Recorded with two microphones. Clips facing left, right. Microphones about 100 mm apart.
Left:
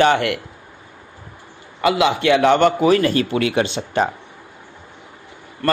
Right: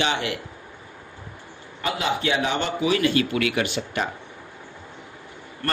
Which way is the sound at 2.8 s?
40° left (ahead or behind).